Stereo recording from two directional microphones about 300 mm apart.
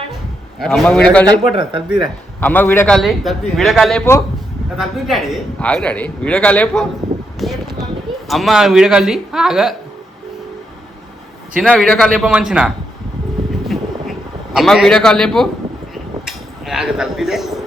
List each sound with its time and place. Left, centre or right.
0.6 s a man's voice: centre
1.5 s speech: centre
2.4 s a man's voice: centre
7.3 s a sound: centre
8.3 s a man's voice: centre
11.5 s a man's voice: centre
13.7 s a sound: centre